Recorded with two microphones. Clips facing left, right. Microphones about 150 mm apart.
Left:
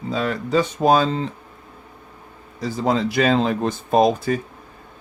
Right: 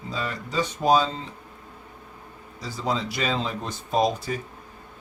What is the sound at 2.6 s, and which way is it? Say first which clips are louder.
Speech: left 7 dB; 55° left (ahead or behind).